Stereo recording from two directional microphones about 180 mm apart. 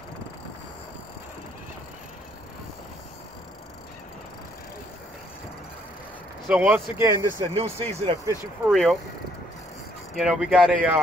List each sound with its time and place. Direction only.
6.4 s speech: 5° right (ahead or behind)
7.0 s speech: 15° right (ahead or behind)
7.3 s speech: 30° right (ahead or behind)
8.6 s speech: centre (ahead or behind)
10.1 s speech: 5° right (ahead or behind)